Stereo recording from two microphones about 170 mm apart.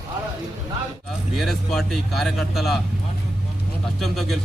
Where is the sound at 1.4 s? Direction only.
Centre (ahead or behind).